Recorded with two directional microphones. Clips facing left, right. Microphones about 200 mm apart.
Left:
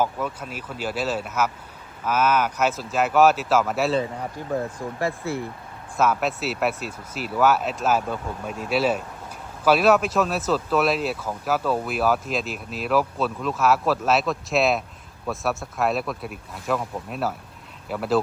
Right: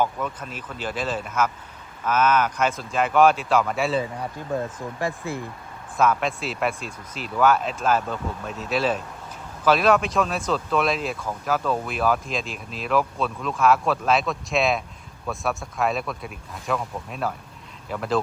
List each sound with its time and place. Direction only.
0.0 s speech: 5° left (ahead or behind)
4.9 s speech: 15° right (ahead or behind)
6.0 s speech: 5° left (ahead or behind)